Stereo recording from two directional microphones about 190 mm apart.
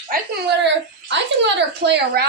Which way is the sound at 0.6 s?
70° right (ahead or behind).